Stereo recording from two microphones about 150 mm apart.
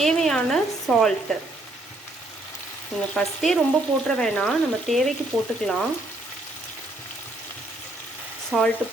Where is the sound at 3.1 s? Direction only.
Centre (ahead or behind).